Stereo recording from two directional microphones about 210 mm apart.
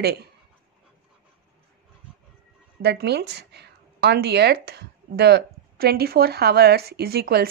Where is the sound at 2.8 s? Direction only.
50° right (ahead or behind).